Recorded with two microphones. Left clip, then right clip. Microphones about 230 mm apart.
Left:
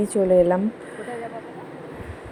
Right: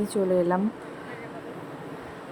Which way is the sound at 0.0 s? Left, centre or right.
Centre.